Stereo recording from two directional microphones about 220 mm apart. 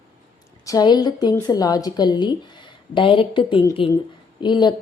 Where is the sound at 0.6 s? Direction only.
15° left (ahead or behind).